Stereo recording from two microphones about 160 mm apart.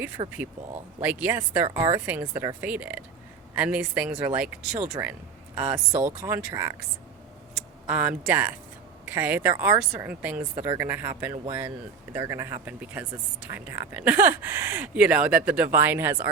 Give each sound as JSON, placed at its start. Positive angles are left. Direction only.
{"t": 0.2, "sound": "speech", "side_deg": -30}
{"t": 1.0, "sound": "speech", "side_deg": -10}
{"t": 1.6, "sound": "speech", "side_deg": -25}
{"t": 2.6, "sound": "speech", "side_deg": -10}
{"t": 7.5, "sound": "speech", "side_deg": -5}